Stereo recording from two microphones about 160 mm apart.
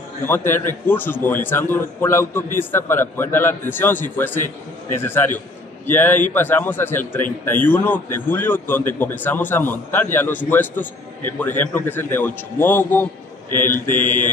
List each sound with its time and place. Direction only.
0.2 s a man's voice: 15° left (ahead or behind)
14.0 s mantra: 55° left (ahead or behind)